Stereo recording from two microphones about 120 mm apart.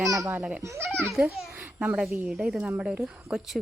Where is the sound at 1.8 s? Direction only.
10° right (ahead or behind).